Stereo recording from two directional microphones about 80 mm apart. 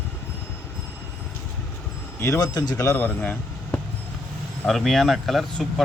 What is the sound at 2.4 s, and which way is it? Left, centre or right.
Speech, left.